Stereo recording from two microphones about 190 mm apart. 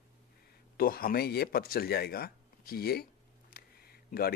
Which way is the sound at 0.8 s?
50° left (ahead or behind).